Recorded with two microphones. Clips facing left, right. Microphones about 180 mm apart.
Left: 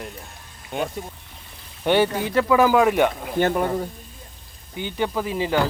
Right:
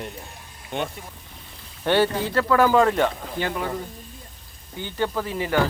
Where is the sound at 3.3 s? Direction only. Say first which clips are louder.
Left 6 dB; 50° left (ahead or behind).